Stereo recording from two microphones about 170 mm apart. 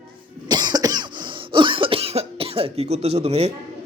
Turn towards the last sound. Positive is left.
turn(degrees=-35)  # may be behind; listen again after turning